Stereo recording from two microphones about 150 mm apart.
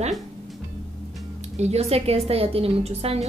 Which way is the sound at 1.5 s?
45° right (ahead or behind).